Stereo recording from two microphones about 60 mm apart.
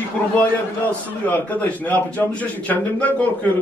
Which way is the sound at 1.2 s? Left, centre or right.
Left.